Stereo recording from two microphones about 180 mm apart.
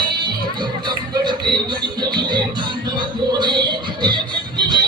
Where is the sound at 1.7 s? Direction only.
25° right (ahead or behind).